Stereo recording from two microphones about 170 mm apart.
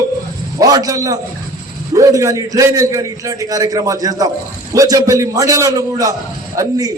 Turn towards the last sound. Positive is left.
turn(degrees=-20)  # may be behind; listen again after turning